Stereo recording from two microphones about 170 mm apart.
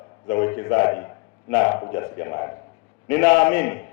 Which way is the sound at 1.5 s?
15° left (ahead or behind).